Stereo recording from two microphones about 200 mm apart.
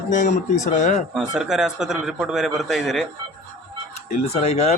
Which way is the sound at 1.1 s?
5° right (ahead or behind).